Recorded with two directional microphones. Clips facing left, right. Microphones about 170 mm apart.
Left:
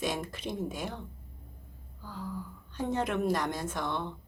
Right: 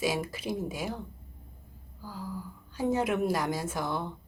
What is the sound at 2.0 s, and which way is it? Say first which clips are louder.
A woman's voice: right 1 dB; 5° right (ahead or behind).